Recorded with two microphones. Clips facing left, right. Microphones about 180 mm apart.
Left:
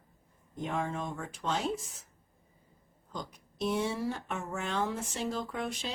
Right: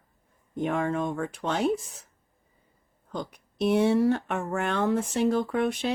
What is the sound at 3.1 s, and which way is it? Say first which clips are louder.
Speech: right 7 dB; 65° right (ahead or behind).